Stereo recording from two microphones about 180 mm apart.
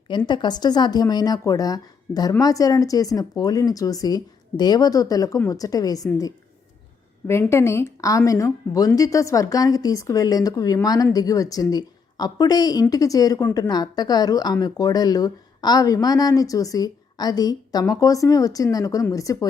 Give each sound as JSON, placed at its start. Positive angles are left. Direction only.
{"t": 0.3, "sound": "a woman's voice", "side_deg": 25}